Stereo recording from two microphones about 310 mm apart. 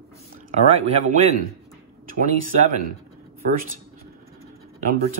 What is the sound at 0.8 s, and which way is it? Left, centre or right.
Speech, right.